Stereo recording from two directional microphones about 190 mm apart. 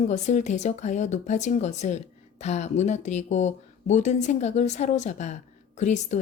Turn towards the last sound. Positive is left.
turn(degrees=40)  # may be behind; listen again after turning